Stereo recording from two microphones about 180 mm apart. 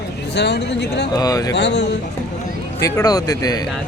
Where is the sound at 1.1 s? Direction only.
20° left (ahead or behind).